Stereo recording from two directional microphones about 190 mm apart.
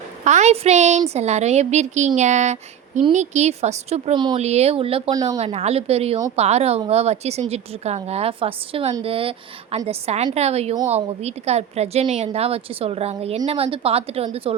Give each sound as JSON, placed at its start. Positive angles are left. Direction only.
{"t": 0.3, "sound": "a woman's voice", "side_deg": -35}
{"t": 4.4, "sound": "a woman's voice", "side_deg": -35}
{"t": 5.1, "sound": "a woman's voice", "side_deg": -20}
{"t": 5.4, "sound": "a woman's voice", "side_deg": -35}